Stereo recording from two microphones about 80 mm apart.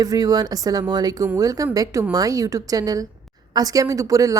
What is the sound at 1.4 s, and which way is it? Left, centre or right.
A woman's voice, right.